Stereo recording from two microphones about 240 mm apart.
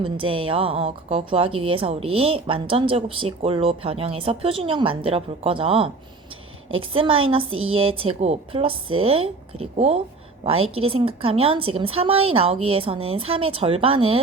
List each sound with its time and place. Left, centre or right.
0.0 s a woman's voice: right